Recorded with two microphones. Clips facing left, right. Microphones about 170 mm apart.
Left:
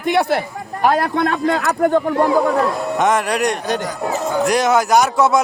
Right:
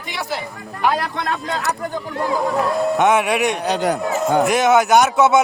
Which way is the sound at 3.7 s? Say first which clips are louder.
Right 2 dB; 65° right (ahead or behind).